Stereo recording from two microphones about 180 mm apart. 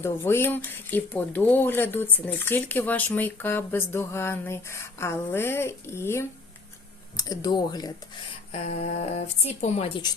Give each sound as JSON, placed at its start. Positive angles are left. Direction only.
{"t": 0.0, "sound": "speech", "side_deg": 15}
{"t": 8.5, "sound": "speech", "side_deg": 40}